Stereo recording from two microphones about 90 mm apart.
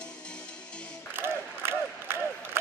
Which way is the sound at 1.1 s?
25° right (ahead or behind).